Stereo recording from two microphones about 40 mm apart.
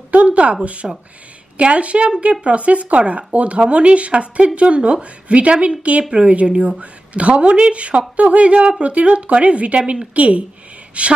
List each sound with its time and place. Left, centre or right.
0.1 s a sound: right
0.8 s speech: centre
1.6 s a woman's voice: right